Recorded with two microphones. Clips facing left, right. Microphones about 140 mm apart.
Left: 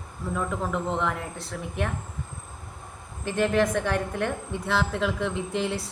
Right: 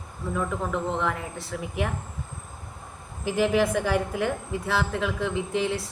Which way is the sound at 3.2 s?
5° right (ahead or behind).